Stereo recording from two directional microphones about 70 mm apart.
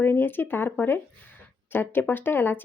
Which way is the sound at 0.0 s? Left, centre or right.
Left.